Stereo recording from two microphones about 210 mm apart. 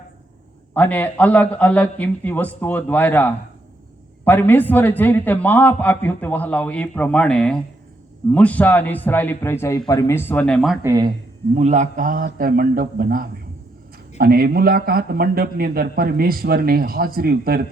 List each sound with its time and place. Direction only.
0.7 s a man's voice: 10° left (ahead or behind)
10.8 s speech: 15° right (ahead or behind)
11.5 s a man's voice: 35° right (ahead or behind)